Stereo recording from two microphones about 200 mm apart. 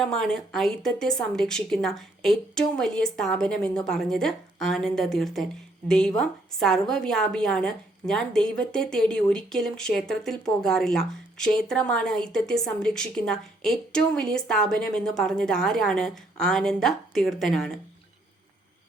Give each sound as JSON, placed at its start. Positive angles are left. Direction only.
{"t": 0.0, "sound": "a woman's voice", "side_deg": 5}